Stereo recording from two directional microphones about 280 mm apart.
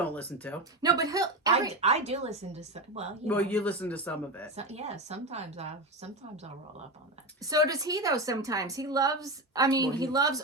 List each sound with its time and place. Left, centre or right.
0.0 s a man's voice: centre
0.8 s a woman's voice: centre
1.7 s a woman's voice: right
3.2 s a man's voice: centre
4.5 s a woman's voice: right
7.4 s a woman's voice: centre